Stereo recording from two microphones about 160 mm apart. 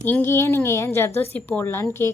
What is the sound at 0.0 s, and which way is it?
Speech, 15° left (ahead or behind).